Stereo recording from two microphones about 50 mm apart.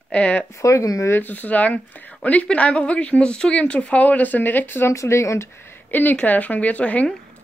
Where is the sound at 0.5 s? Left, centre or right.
Left.